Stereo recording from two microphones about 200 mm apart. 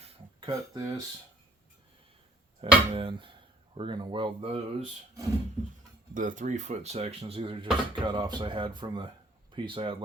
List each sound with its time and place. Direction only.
0.0 s a sound: 20° right (ahead or behind)
2.6 s speech: 30° right (ahead or behind)
6.1 s speech: 40° right (ahead or behind)